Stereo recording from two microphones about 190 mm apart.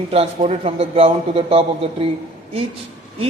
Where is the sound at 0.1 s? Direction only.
30° right (ahead or behind).